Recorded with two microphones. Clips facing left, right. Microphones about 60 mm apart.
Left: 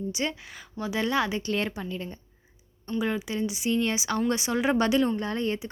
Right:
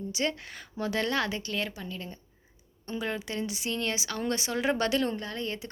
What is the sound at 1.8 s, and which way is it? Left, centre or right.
Speech, centre.